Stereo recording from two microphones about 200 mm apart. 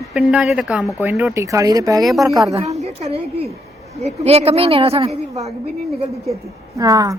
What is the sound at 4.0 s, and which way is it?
A woman's voice, 30° right (ahead or behind).